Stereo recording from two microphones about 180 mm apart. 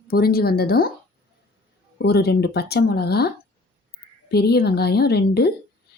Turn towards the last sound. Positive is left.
turn(degrees=65)  # may be behind; listen again after turning